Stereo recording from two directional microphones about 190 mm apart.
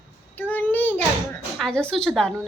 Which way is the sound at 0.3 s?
10° left (ahead or behind).